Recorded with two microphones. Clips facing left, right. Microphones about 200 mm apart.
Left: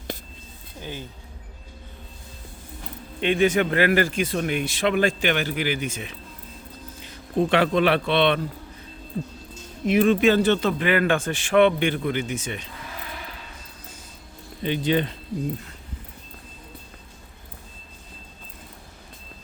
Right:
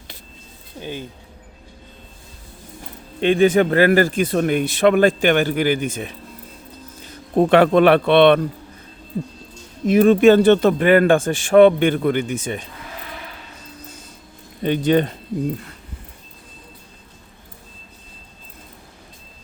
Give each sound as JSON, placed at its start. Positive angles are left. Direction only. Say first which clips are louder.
{"t": 0.8, "sound": "speech", "louder": "right 5 dB", "side_deg": -20}
{"t": 3.2, "sound": "a man's voice", "louder": "right 6 dB", "side_deg": -35}
{"t": 9.8, "sound": "speech", "louder": "right 6 dB", "side_deg": -40}
{"t": 14.6, "sound": "speech", "louder": "right 6 dB", "side_deg": -50}